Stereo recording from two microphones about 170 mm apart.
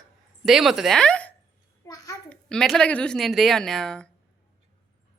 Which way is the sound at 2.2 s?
5° left (ahead or behind).